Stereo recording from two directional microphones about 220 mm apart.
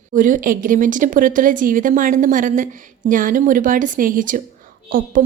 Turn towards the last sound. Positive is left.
turn(degrees=-40)  # may be behind; listen again after turning